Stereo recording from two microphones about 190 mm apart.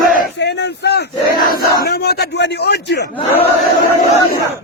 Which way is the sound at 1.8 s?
55° left (ahead or behind).